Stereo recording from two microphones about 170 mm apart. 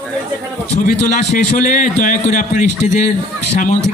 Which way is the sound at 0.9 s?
50° left (ahead or behind).